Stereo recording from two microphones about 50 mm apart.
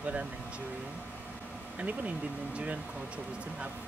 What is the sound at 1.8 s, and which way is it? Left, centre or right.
Speech, right.